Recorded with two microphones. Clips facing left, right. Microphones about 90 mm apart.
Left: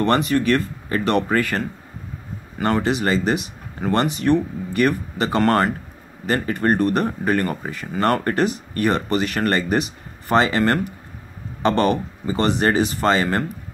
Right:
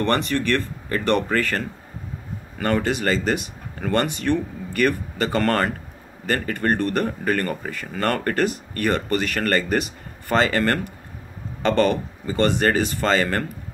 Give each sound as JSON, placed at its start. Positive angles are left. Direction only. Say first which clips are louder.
{"t": 0.0, "sound": "speech", "louder": "left 3 dB", "side_deg": 15}